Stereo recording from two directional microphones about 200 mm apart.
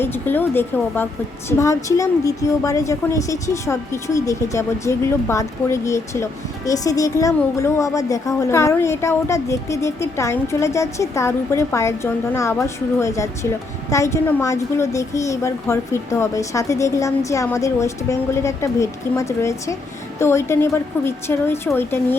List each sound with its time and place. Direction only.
0.0 s a woman's voice: 10° left (ahead or behind)